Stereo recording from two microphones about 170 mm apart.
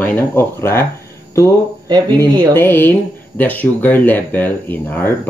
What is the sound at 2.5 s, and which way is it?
Speech, 15° left (ahead or behind).